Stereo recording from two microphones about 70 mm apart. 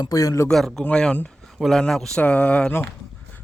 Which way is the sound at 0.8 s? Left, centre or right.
Centre.